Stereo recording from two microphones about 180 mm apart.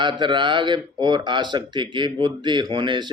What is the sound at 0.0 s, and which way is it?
A man's voice, 25° right (ahead or behind).